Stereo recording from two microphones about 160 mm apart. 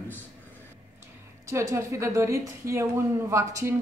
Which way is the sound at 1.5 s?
15° right (ahead or behind).